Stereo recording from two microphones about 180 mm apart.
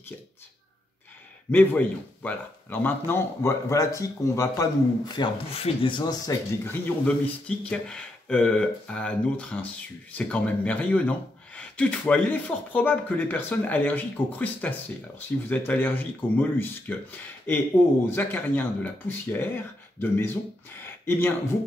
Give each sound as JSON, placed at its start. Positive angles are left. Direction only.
{"t": 1.5, "sound": "speech", "side_deg": 10}
{"t": 7.4, "sound": "speech", "side_deg": 5}
{"t": 20.8, "sound": "a sound", "side_deg": 10}